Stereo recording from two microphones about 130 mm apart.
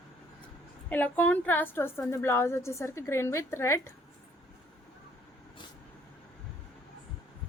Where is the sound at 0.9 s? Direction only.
10° left (ahead or behind).